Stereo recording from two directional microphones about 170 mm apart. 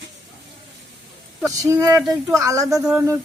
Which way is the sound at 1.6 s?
20° right (ahead or behind).